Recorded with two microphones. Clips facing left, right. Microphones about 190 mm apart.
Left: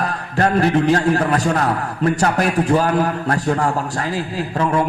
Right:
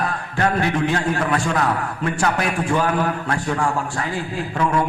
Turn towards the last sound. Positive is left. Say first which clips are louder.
# left 2 dB
turn(degrees=35)  # may be behind; listen again after turning